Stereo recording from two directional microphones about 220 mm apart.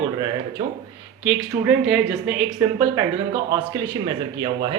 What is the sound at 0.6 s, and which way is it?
Speech, 20° right (ahead or behind).